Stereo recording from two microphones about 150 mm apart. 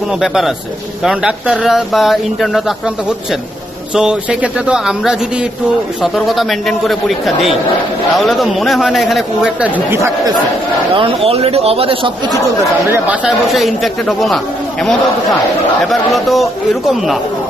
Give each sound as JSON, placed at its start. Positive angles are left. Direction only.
{"t": 0.2, "sound": "speech", "side_deg": -5}
{"t": 3.9, "sound": "speech", "side_deg": -5}
{"t": 6.1, "sound": "speech", "side_deg": 0}
{"t": 11.0, "sound": "speech", "side_deg": -40}
{"t": 12.9, "sound": "speech", "side_deg": -10}